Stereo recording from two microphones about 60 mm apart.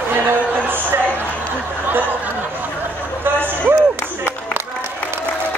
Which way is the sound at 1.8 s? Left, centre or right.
Right.